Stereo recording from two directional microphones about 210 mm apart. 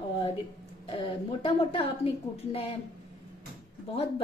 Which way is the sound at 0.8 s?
25° left (ahead or behind).